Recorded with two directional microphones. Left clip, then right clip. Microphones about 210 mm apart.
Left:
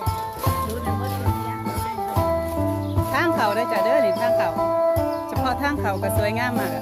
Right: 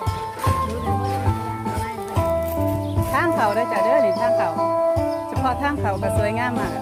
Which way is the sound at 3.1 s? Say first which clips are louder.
Right 1 dB; 10° right (ahead or behind).